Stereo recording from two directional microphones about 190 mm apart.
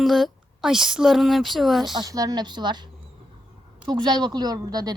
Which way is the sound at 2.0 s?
20° right (ahead or behind).